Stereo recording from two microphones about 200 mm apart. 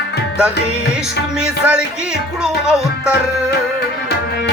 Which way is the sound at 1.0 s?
5° right (ahead or behind).